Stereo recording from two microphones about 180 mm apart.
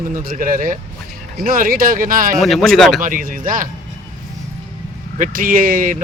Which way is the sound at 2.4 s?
Centre (ahead or behind).